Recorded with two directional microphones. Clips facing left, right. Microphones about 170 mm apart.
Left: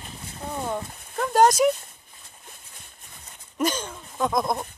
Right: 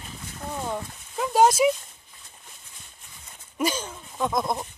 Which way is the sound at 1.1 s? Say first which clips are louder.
Left 1 dB; 5° right (ahead or behind).